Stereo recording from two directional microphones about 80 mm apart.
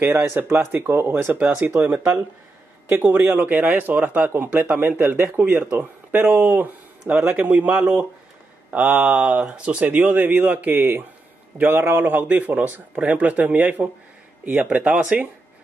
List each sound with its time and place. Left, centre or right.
0.0 s speech: right